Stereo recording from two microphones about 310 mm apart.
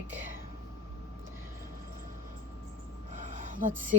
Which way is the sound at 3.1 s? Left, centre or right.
Right.